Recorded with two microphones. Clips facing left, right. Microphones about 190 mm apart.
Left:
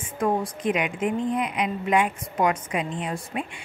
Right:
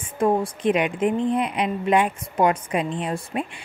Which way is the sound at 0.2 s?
30° right (ahead or behind).